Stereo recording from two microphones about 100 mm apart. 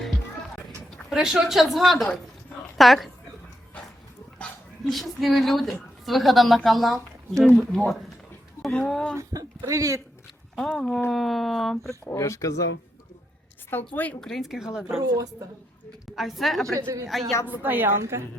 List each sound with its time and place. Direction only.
1.1 s speech: 5° right (ahead or behind)
4.9 s speech: centre (ahead or behind)
9.1 s speech: 35° right (ahead or behind)
10.7 s speech: 5° left (ahead or behind)
11.9 s speech: 30° left (ahead or behind)
13.7 s a woman's voice: 20° left (ahead or behind)
14.2 s speech: 5° left (ahead or behind)
15.0 s a woman's voice: 40° right (ahead or behind)
16.1 s speech: centre (ahead or behind)
16.7 s a woman's voice: 35° right (ahead or behind)
17.1 s speech: centre (ahead or behind)
17.4 s a woman's voice: 20° right (ahead or behind)